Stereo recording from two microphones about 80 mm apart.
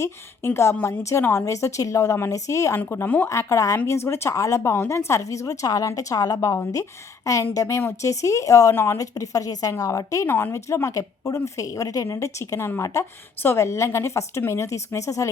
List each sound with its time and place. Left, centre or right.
0.0 s a woman's voice: left
1.5 s speech: left
3.2 s speech: left
8.7 s speech: left
9.0 s speech: left
10.2 s speech: left